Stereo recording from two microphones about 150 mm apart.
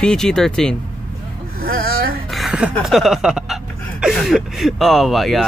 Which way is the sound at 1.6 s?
80° right.